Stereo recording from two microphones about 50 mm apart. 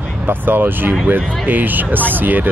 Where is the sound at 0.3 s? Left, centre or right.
Right.